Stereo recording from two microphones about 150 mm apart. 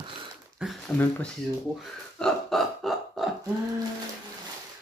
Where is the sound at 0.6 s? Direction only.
5° right (ahead or behind).